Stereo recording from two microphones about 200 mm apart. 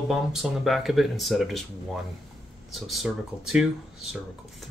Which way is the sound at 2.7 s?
Centre (ahead or behind).